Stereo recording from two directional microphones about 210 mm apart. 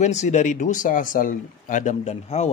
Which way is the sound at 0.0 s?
35° left (ahead or behind).